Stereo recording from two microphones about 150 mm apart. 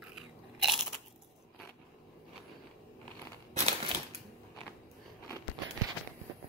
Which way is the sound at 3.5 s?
45° right (ahead or behind).